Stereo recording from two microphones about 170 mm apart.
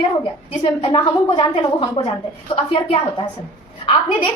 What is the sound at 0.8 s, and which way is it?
A woman's voice, 30° left (ahead or behind).